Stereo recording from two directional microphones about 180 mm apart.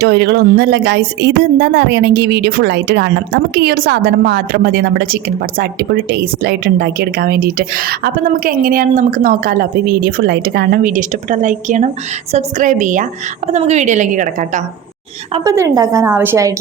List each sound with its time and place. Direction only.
0.0 s a woman's voice: 70° right (ahead or behind); by 14.6 s 45° right (ahead or behind)
15.4 s a woman's voice: 20° right (ahead or behind)